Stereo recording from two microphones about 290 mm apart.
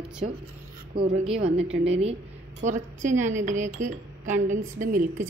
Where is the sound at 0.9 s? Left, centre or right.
Right.